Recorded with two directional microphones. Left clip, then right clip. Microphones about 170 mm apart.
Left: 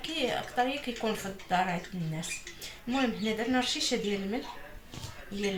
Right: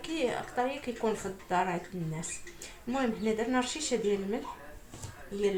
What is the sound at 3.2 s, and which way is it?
Speech, 15° right (ahead or behind).